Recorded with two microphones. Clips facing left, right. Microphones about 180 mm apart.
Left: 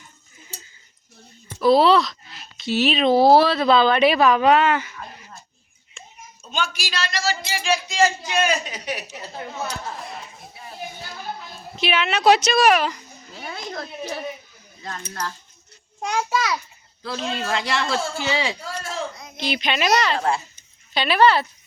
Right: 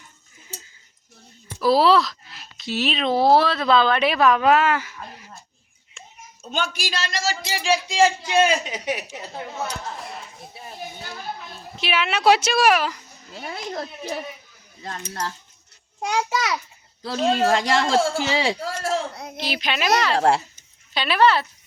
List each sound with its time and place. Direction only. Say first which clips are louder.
1.6 s speech: left 2 dB; centre (ahead or behind)
6.5 s a man's voice: right 1 dB; 50° right (ahead or behind)
7.9 s speech: right 2 dB; 30° right (ahead or behind)
11.9 s speech: left 1 dB; 5° right (ahead or behind)
13.5 s speech: right 2 dB; 25° right (ahead or behind)
16.0 s speech: even; 15° right (ahead or behind)
17.0 s a man's voice: right 7 dB; 40° right (ahead or behind)
18.6 s speech: right 4 dB; 80° right
19.4 s speech: left 2 dB; 5° right (ahead or behind)
20.1 s speech: right 4 dB; 75° right (ahead or behind)
20.9 s speech: left 1 dB; centre (ahead or behind)